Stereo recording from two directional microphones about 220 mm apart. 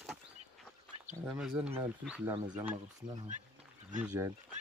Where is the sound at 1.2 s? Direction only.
5° right (ahead or behind).